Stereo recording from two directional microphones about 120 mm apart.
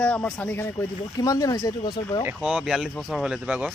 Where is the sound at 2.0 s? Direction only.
40° left (ahead or behind).